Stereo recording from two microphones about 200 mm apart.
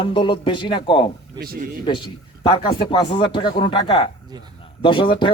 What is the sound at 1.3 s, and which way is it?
Speech, 50° right (ahead or behind).